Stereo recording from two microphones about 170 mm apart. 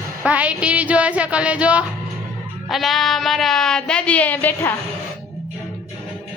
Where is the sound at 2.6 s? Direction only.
Centre (ahead or behind).